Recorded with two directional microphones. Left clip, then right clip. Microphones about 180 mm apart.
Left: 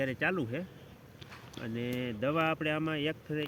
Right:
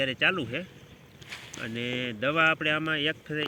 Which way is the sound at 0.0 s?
20° left (ahead or behind).